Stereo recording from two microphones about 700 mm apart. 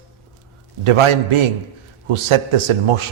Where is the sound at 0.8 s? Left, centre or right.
Right.